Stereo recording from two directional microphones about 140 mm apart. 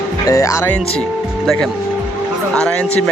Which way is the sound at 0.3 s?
25° left (ahead or behind).